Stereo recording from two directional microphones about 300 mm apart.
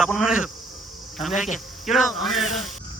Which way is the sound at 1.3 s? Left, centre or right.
Left.